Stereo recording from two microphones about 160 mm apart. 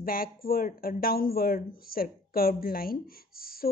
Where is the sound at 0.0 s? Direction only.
65° left (ahead or behind).